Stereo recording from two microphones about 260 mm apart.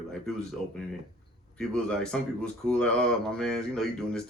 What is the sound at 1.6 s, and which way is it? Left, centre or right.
Speech, centre.